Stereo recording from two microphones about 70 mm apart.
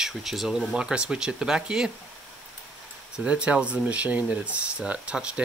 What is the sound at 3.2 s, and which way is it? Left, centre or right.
Speech, centre.